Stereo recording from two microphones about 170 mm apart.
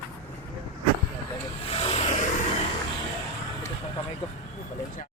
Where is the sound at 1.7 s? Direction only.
35° left (ahead or behind).